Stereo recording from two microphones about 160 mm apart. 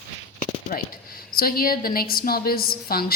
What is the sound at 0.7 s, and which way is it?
A woman's voice, 60° left (ahead or behind).